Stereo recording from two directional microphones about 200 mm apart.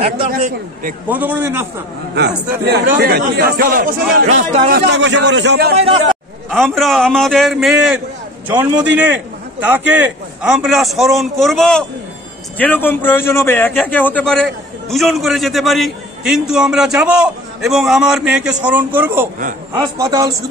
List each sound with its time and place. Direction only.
1.0 s a man's voice: 10° right (ahead or behind)
2.1 s a man's voice: 55° right (ahead or behind)
5.8 s speech: 30° right (ahead or behind)
6.7 s a man's voice: centre (ahead or behind); by 20.4 s 20° right (ahead or behind)